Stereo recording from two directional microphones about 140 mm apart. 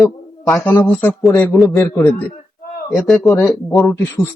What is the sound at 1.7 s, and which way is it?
Speech, 20° left (ahead or behind).